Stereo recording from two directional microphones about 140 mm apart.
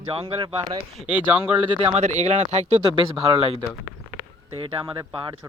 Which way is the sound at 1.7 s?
45° right (ahead or behind).